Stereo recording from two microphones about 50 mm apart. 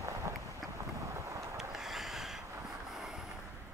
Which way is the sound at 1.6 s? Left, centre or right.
Centre.